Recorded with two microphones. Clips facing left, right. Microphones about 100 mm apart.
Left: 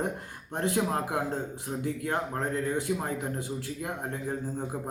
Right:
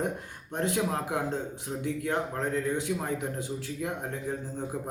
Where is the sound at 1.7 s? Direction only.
20° left (ahead or behind).